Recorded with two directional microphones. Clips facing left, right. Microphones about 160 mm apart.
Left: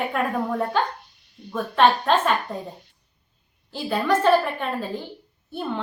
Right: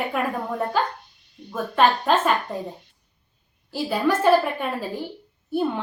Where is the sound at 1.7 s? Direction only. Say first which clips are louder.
Left 1 dB; 5° right (ahead or behind).